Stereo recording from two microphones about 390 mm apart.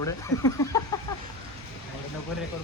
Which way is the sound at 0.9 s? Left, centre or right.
Centre.